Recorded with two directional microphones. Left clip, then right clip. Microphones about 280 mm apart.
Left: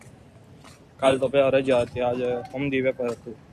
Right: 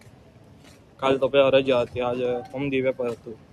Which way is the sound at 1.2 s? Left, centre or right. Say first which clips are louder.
Right 2 dB; centre.